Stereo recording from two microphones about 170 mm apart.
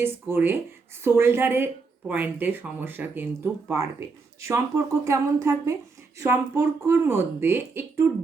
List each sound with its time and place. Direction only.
0.0 s speech: 10° right (ahead or behind)